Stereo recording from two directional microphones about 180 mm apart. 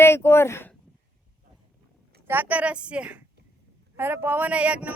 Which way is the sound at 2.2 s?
10° right (ahead or behind).